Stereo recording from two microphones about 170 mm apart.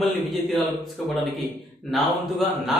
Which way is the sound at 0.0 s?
Centre (ahead or behind).